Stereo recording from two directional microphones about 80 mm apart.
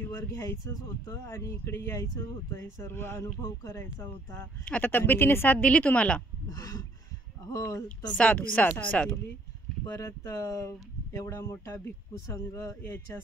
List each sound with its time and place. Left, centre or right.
0.0 s speech: left
3.4 s speech: left
4.6 s speech: left
6.5 s a sound: left
7.5 s speech: left
8.2 s speech: centre
9.8 s speech: left